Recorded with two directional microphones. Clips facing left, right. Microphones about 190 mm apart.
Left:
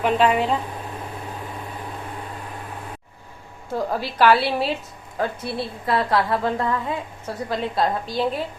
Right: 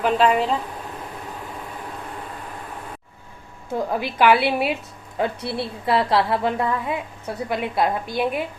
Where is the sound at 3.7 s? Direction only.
15° right (ahead or behind).